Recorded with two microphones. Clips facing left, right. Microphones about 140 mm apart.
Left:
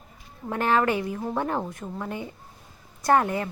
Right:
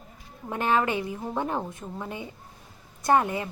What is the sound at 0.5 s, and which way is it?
A woman's voice, 20° right (ahead or behind).